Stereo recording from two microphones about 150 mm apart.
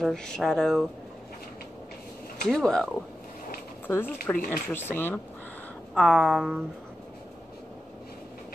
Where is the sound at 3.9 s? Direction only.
15° left (ahead or behind).